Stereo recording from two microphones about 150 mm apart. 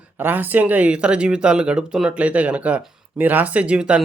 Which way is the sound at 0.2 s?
10° right (ahead or behind).